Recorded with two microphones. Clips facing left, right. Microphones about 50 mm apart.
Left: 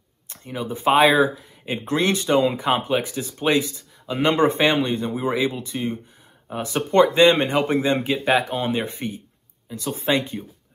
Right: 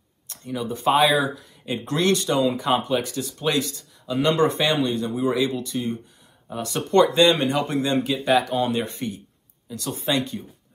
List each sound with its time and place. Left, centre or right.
0.3 s speech: left
9.9 s speech: left